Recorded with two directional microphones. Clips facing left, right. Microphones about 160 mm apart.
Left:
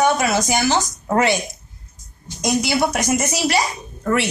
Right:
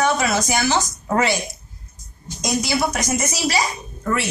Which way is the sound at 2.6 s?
60° left (ahead or behind).